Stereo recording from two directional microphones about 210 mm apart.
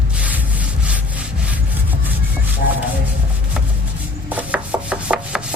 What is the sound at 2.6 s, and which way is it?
Rub, 50° left (ahead or behind).